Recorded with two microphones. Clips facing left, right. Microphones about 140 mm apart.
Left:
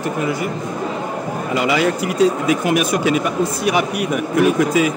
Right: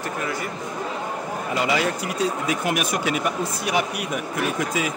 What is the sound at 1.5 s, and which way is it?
Speech, 90° left.